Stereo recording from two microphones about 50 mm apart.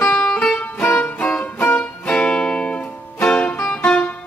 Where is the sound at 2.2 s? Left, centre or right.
Centre.